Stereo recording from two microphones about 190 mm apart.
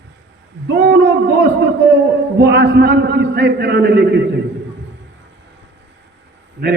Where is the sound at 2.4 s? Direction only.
60° right (ahead or behind).